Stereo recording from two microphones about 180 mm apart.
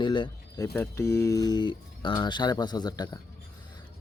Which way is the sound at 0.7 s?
10° left (ahead or behind).